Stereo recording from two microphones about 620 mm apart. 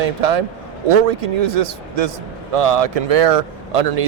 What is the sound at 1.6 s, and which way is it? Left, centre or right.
A man's voice, right.